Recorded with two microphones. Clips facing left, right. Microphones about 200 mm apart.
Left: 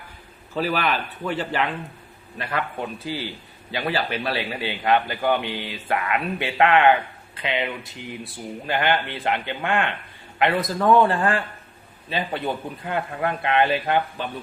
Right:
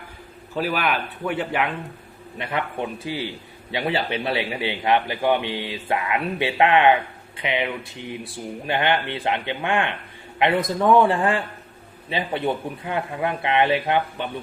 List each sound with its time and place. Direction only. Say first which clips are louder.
0.6 s a man's voice: even; 10° right (ahead or behind)